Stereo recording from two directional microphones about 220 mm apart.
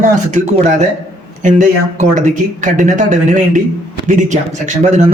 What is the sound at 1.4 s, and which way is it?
Speech, 35° right (ahead or behind).